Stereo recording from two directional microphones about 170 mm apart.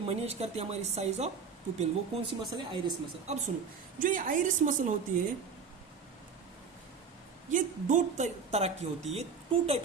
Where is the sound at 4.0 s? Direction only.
55° right (ahead or behind).